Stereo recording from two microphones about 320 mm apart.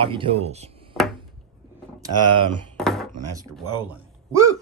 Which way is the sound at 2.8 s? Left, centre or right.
Centre.